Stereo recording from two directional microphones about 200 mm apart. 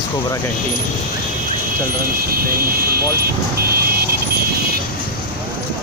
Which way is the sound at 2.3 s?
50° right (ahead or behind).